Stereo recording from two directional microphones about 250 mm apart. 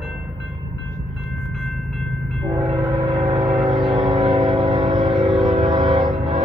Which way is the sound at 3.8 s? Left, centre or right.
Centre.